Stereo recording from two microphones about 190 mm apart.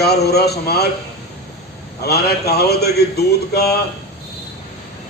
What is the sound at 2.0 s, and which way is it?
A man's voice, 55° left (ahead or behind).